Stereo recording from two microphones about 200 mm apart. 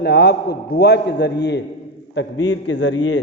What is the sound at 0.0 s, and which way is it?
A man's voice, 55° left (ahead or behind).